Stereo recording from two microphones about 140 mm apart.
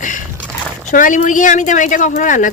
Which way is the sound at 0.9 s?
70° left (ahead or behind).